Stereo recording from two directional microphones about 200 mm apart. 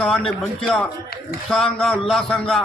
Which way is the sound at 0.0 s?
5° left (ahead or behind).